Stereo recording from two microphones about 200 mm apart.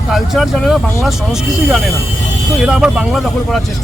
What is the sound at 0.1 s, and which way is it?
Speech, centre (ahead or behind).